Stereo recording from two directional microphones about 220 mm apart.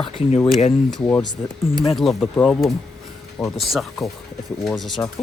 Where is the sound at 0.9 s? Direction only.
10° left (ahead or behind).